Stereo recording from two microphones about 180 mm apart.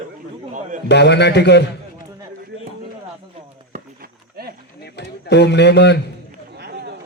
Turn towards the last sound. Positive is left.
turn(degrees=70)  # may be behind; listen again after turning